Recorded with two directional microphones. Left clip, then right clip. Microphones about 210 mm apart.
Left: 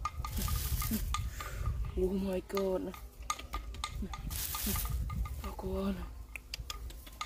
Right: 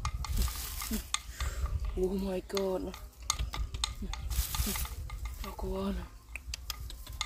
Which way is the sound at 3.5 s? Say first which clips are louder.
Right 4 dB; 55° right (ahead or behind).